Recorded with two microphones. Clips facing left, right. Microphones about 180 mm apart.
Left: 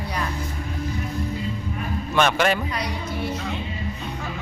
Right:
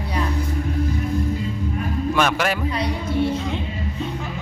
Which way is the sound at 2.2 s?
5° right (ahead or behind).